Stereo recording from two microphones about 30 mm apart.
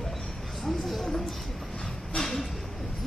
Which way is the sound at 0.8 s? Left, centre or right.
Centre.